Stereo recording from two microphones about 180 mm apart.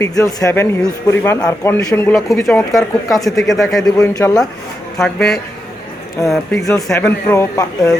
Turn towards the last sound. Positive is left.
turn(degrees=15)  # may be behind; listen again after turning